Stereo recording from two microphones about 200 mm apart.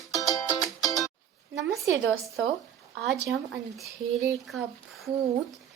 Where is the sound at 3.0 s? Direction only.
60° right (ahead or behind).